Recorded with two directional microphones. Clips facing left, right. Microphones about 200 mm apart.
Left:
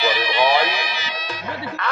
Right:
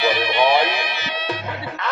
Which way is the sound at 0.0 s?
55° right (ahead or behind).